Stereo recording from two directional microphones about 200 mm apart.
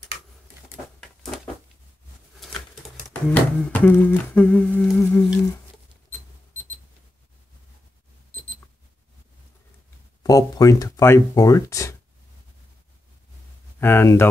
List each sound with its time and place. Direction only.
2.4 s bird: centre (ahead or behind)
3.1 s humming: 10° left (ahead or behind)
10.2 s humming: 15° left (ahead or behind)
13.7 s humming: 10° left (ahead or behind)